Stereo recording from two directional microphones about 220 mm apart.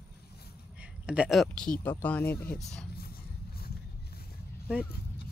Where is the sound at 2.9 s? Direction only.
45° left (ahead or behind).